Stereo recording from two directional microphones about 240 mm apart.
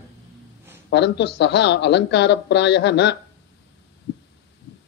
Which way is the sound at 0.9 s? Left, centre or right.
Left.